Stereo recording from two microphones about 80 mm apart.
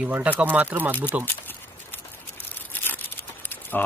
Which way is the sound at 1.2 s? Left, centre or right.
Left.